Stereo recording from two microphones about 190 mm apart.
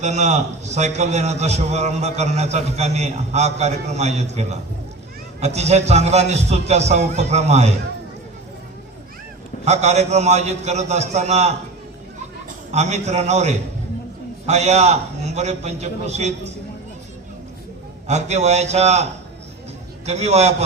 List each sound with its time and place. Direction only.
0.0 s a man's voice: 40° right (ahead or behind)
9.6 s a man's voice: 35° right (ahead or behind)
12.7 s a man's voice: 35° right (ahead or behind)
18.1 s a man's voice: 35° right (ahead or behind)
20.1 s a man's voice: 35° right (ahead or behind)